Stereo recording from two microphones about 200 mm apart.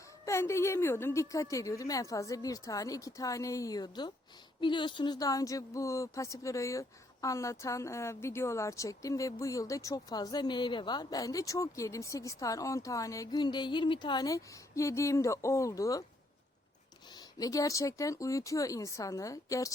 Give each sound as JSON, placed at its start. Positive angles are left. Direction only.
{"t": 0.3, "sound": "speech", "side_deg": 15}
{"t": 17.2, "sound": "speech", "side_deg": 15}